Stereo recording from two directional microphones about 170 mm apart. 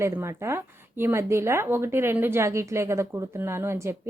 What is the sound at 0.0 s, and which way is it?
A woman's voice, 15° right (ahead or behind).